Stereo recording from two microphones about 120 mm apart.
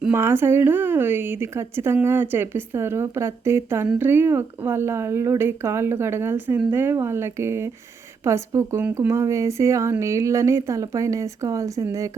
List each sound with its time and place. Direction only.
0.1 s speech: 20° right (ahead or behind)